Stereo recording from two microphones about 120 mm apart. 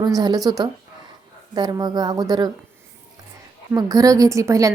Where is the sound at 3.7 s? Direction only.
30° right (ahead or behind).